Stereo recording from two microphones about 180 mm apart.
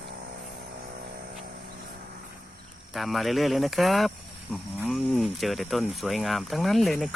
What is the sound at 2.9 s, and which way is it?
Speech, centre (ahead or behind).